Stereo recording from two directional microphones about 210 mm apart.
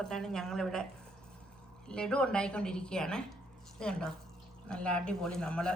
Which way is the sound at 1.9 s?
5° left (ahead or behind).